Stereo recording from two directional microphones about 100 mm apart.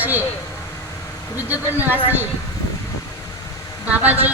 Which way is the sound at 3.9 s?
15° right (ahead or behind).